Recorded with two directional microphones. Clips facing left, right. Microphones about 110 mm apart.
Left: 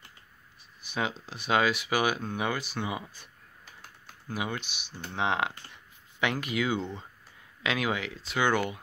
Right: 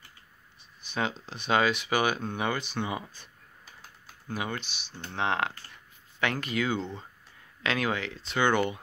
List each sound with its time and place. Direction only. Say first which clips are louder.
0.8 s speech: right 1 dB; 5° left (ahead or behind)
4.3 s speech: even; 10° left (ahead or behind)